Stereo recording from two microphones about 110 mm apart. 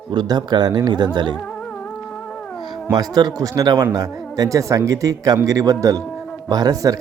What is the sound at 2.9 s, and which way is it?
A man's voice, 35° right (ahead or behind).